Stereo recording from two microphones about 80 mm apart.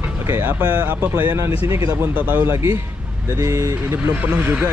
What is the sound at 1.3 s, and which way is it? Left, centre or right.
Speech, right.